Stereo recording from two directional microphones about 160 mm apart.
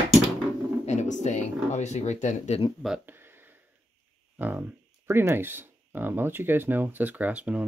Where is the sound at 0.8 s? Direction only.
45° left (ahead or behind).